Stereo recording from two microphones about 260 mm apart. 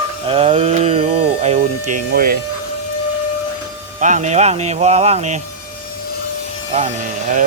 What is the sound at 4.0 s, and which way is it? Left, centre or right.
Speech, right.